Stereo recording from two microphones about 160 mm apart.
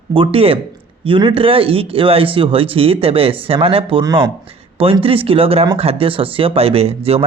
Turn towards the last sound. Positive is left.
turn(degrees=-40)  # may be behind; listen again after turning